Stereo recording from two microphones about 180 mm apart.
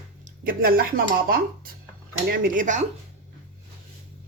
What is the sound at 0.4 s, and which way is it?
Speech, 55° right (ahead or behind).